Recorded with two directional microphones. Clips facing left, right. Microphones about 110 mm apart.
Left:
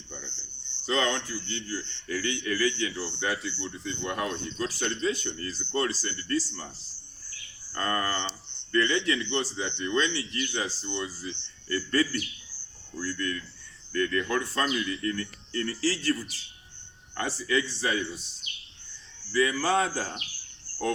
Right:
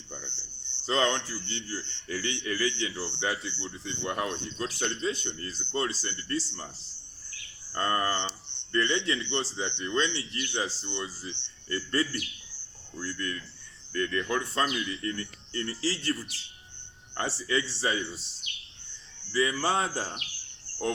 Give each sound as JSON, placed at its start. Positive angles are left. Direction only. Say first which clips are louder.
{"t": 0.9, "sound": "a man's voice", "louder": "even", "side_deg": -30}
{"t": 7.7, "sound": "a man's voice", "louder": "right 1 dB", "side_deg": -25}
{"t": 17.2, "sound": "a man's voice", "louder": "left 2 dB", "side_deg": -30}
{"t": 19.3, "sound": "a man's voice", "louder": "left 2 dB", "side_deg": -25}